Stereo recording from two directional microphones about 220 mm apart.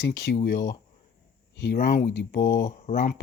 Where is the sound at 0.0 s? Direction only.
50° left (ahead or behind).